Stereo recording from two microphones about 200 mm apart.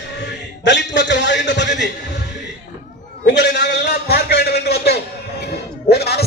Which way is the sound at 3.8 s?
50° left (ahead or behind).